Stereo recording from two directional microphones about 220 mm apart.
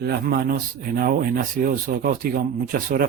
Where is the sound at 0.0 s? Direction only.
45° right (ahead or behind).